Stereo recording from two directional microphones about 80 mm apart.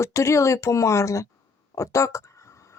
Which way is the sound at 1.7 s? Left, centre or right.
Left.